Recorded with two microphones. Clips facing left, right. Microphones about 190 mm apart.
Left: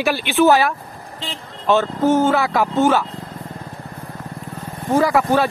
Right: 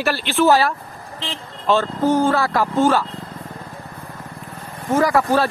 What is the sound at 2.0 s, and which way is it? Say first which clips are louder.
Speech: left 1 dB; 25° left (ahead or behind).